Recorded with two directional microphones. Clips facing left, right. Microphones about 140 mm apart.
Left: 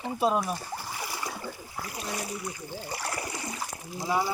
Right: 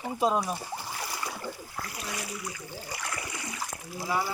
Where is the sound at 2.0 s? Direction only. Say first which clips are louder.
Left 5 dB; 30° left (ahead or behind).